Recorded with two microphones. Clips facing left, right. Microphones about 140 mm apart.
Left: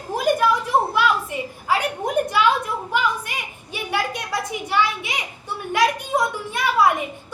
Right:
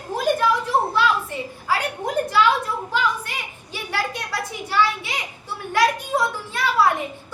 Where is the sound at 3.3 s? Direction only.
15° left (ahead or behind).